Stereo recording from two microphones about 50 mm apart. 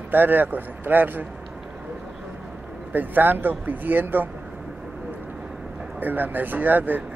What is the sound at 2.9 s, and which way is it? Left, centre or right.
Speech, right.